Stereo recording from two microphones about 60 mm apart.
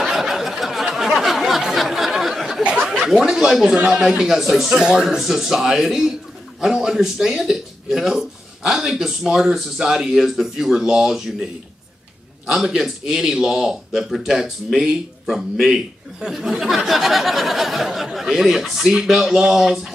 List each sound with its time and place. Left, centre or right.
0.0 s a sound: centre
2.8 s a man's voice: centre
12.4 s a man's voice: centre